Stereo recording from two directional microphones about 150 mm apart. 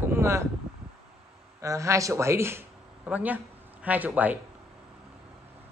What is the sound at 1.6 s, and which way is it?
Speech, 20° right (ahead or behind).